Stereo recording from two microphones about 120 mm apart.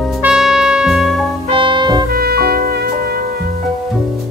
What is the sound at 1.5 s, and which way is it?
Music, 40° right (ahead or behind).